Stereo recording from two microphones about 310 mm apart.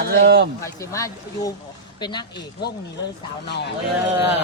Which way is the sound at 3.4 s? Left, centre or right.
Left.